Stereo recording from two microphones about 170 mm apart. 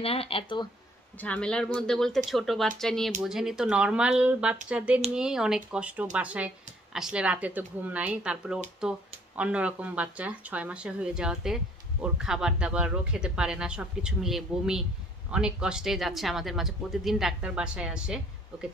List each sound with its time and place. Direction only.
0.0 s speech: 35° left (ahead or behind)
1.2 s a woman's voice: 5° left (ahead or behind)